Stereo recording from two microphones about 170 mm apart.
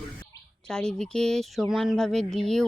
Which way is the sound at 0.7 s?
5° left (ahead or behind).